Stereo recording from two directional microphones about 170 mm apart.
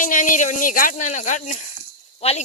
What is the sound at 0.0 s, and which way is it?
Speech, 50° left (ahead or behind).